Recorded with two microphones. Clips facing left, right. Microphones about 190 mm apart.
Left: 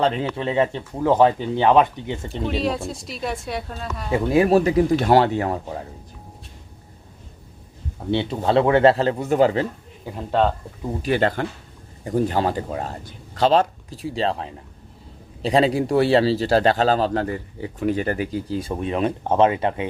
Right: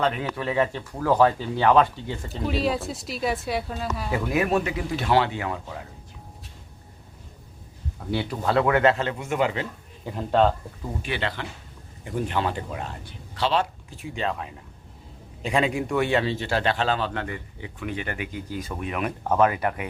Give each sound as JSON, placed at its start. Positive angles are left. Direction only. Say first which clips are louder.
{"t": 0.0, "sound": "speech", "louder": "left 4 dB", "side_deg": 25}
{"t": 2.3, "sound": "a woman's voice", "louder": "left 1 dB", "side_deg": 0}
{"t": 4.1, "sound": "a man's voice", "louder": "left 7 dB", "side_deg": 25}
{"t": 7.9, "sound": "a man's voice", "louder": "left 5 dB", "side_deg": 25}
{"t": 10.1, "sound": "a woman's voice", "louder": "even", "side_deg": 0}
{"t": 11.0, "sound": "a man's voice", "louder": "left 10 dB", "side_deg": 45}